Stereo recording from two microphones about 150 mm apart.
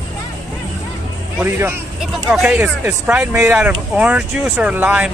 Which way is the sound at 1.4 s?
10° right (ahead or behind).